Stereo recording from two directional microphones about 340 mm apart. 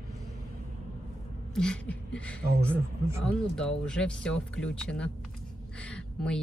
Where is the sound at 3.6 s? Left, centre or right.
Centre.